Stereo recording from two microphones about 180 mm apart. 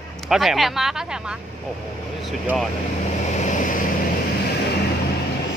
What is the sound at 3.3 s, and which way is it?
Vehicle, 40° left (ahead or behind).